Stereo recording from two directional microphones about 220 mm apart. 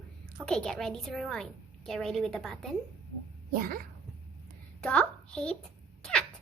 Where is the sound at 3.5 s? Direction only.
40° right (ahead or behind).